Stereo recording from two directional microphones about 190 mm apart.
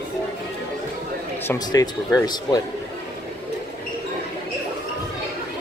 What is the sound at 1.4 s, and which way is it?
Speech, 20° left (ahead or behind).